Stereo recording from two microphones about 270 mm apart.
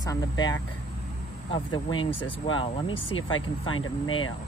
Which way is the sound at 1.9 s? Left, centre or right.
Left.